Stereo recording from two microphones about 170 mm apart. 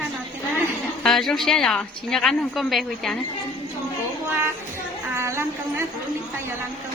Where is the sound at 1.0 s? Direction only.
Centre (ahead or behind).